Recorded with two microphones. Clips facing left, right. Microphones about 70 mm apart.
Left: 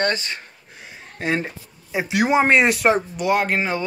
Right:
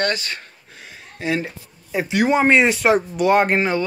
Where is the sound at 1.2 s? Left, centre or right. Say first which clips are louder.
Even; left.